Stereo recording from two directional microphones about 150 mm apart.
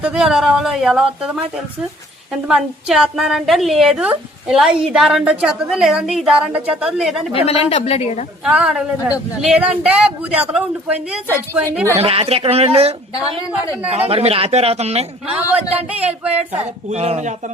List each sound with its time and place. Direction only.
0.0 s a woman's voice: 5° right (ahead or behind)
2.3 s a woman's voice: 5° right (ahead or behind)
7.3 s a woman's voice: 40° left (ahead or behind)
8.4 s a man's voice: 5° right (ahead or behind)
11.6 s a man's voice: 15° right (ahead or behind)
11.9 s a woman's voice: 40° right (ahead or behind)
13.9 s speech: 40° right (ahead or behind)
15.3 s a man's voice: 10° right (ahead or behind)
16.5 s speech: 45° right (ahead or behind)